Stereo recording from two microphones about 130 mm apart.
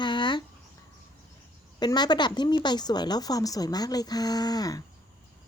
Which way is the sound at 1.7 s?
35° left (ahead or behind).